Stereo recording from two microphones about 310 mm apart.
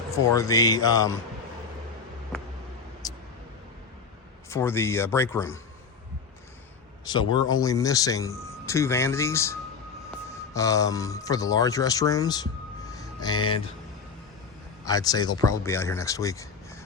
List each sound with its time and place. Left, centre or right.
0.1 s speech: centre
2.3 s a sound: centre
3.0 s vehicle: centre
4.4 s speech: centre
7.0 s speech: centre
12.9 s a sound: centre
14.8 s speech: centre